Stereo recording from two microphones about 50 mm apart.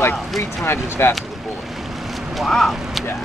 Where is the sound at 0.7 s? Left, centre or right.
Left.